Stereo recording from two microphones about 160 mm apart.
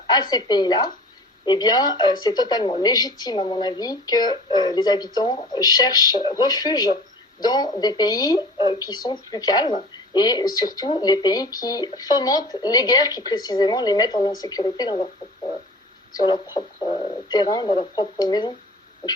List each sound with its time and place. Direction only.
0.1 s speech: 25° left (ahead or behind)
16.1 s speech: 25° left (ahead or behind)